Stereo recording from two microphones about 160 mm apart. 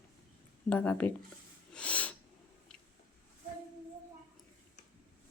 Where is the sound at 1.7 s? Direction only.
10° left (ahead or behind).